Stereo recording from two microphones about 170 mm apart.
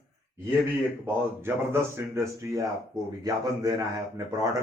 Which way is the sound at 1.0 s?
15° right (ahead or behind).